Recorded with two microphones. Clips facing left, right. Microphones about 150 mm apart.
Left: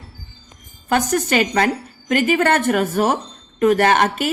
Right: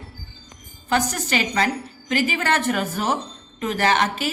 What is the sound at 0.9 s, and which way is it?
A woman's voice, 50° left (ahead or behind).